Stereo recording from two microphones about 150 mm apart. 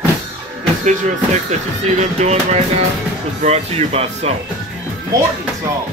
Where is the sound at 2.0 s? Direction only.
45° right (ahead or behind).